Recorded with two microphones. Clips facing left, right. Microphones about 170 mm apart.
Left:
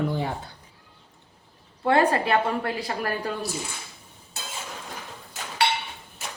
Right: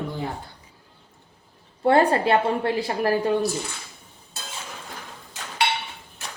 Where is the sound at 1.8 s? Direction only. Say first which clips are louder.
Right 3 dB; 30° right (ahead or behind).